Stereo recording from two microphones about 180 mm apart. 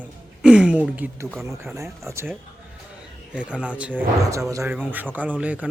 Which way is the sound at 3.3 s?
5° right (ahead or behind).